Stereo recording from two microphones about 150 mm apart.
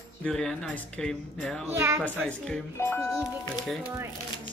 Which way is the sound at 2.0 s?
5° left (ahead or behind).